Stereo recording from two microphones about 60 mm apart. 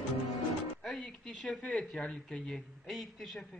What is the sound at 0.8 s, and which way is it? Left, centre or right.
Music, centre.